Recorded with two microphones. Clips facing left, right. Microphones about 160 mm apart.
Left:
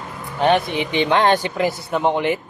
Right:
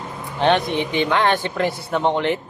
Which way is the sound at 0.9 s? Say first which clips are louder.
Left 3 dB; 20° left (ahead or behind).